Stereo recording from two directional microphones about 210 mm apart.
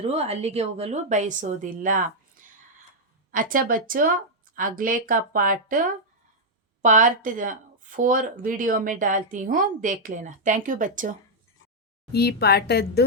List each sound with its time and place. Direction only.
0.0 s speech: 30° right (ahead or behind)
3.3 s speech: 40° right (ahead or behind)
12.1 s a woman's voice: 50° left (ahead or behind)